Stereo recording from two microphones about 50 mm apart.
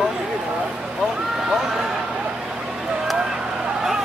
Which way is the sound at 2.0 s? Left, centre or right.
Right.